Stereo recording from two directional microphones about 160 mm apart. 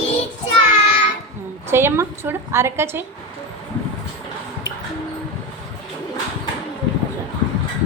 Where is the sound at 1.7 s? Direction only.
15° right (ahead or behind).